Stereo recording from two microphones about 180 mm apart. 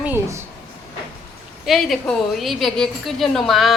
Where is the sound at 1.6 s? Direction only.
Centre (ahead or behind).